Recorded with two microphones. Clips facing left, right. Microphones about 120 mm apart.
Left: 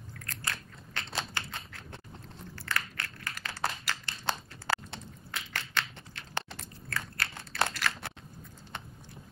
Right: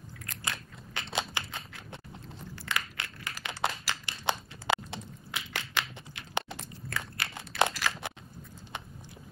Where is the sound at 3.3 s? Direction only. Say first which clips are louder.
Right 2 dB; 20° right (ahead or behind).